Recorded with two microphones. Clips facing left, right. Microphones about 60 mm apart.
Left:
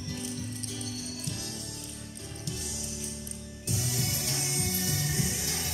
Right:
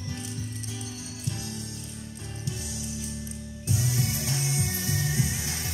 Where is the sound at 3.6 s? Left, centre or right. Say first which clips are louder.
Right 5 dB; right.